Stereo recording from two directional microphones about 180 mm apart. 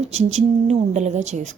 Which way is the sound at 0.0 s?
35° right (ahead or behind).